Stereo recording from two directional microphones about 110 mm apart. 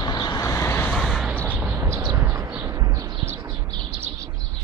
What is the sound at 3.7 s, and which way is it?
Bird, 40° right (ahead or behind).